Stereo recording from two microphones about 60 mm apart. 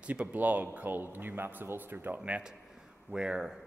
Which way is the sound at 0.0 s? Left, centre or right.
Right.